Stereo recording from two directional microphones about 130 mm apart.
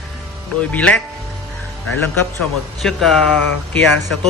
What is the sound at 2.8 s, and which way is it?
Speech, centre (ahead or behind).